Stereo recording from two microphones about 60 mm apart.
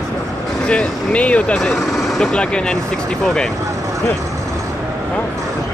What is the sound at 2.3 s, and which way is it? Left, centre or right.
Speech, centre.